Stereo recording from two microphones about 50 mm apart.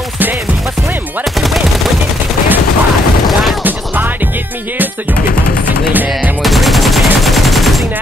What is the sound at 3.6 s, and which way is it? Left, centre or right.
Music, right.